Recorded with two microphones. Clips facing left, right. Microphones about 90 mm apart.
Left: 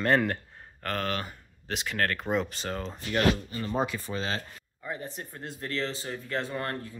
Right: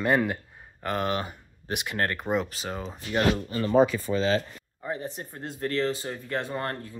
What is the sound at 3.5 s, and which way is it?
Speech, 85° right.